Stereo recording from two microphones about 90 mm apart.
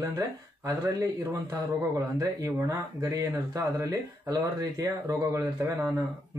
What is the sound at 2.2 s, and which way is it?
A man's voice, 40° right (ahead or behind).